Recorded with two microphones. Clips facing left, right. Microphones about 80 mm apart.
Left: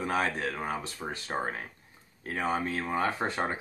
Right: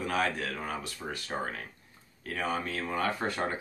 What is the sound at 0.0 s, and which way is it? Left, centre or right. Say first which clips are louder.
Speech: left 1 dB; left.